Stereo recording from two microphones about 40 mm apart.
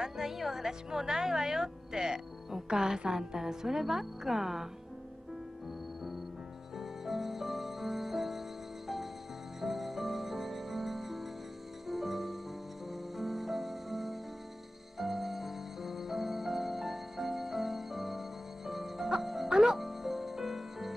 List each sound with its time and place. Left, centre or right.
0.0 s a woman's voice: centre
6.8 s music: centre
19.5 s music: centre
19.8 s music: centre